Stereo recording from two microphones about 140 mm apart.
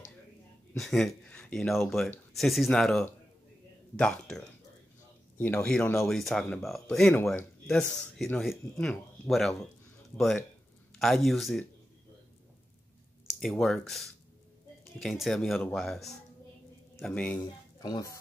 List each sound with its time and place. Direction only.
0.7 s speech: centre (ahead or behind)
5.4 s speech: 10° left (ahead or behind)
6.0 s speech: 5° left (ahead or behind)
13.3 s speech: centre (ahead or behind)
17.4 s speech: 25° left (ahead or behind)